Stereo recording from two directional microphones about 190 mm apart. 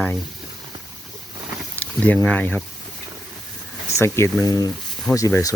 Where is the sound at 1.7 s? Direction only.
10° left (ahead or behind).